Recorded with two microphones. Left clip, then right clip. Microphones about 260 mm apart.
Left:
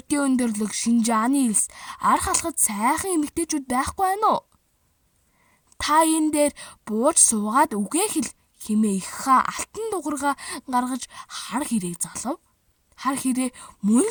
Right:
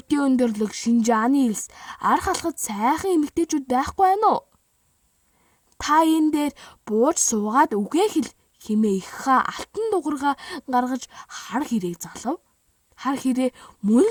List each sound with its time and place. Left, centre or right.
0.2 s speech: left
5.7 s speech: left